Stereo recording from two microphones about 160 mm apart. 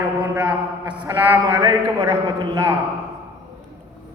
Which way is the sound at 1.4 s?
20° right (ahead or behind).